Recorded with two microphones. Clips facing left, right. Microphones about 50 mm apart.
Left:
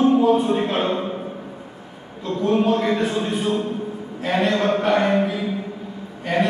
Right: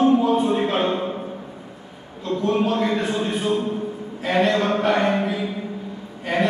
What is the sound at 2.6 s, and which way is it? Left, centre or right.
Speech, centre.